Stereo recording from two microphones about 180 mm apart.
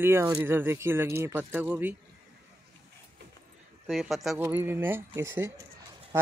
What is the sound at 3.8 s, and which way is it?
Speech, centre (ahead or behind).